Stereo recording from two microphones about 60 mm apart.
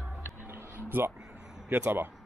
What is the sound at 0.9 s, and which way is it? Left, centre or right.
Speech, right.